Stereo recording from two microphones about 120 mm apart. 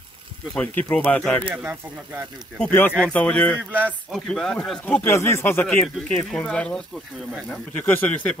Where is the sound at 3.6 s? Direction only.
15° right (ahead or behind).